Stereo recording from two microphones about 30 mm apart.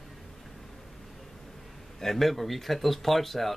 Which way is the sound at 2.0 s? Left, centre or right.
Centre.